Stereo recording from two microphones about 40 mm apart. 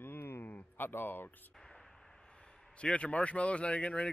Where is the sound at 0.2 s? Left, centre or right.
Left.